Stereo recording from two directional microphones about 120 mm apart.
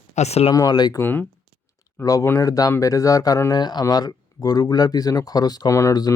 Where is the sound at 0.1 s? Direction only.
65° left (ahead or behind).